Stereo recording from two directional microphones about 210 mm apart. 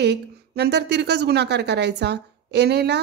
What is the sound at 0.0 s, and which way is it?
A woman's voice, 50° right (ahead or behind).